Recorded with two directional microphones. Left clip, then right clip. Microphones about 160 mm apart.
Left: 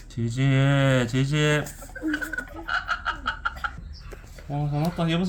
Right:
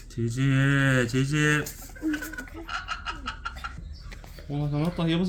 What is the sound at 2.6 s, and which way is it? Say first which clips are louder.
Frog: left 6 dB; 70° left (ahead or behind).